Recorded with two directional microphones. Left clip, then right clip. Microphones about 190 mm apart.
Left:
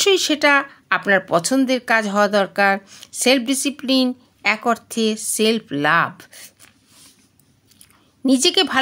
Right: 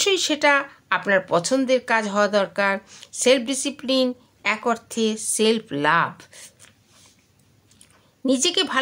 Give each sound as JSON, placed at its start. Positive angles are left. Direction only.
{"t": 0.0, "sound": "speech", "side_deg": 20}
{"t": 8.2, "sound": "speech", "side_deg": 15}